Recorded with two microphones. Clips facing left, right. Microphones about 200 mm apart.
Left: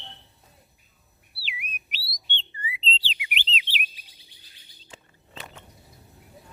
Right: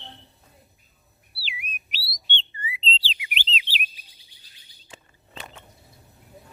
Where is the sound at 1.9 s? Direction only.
30° right (ahead or behind).